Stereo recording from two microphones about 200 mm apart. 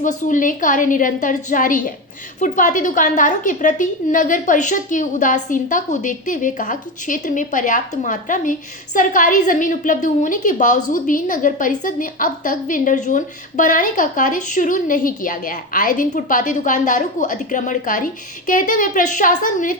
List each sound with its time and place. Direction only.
0.0 s a woman's voice: 40° left (ahead or behind)